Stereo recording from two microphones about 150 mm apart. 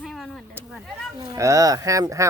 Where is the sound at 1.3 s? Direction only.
20° right (ahead or behind).